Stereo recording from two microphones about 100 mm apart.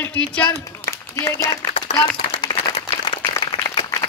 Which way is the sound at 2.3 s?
65° left (ahead or behind).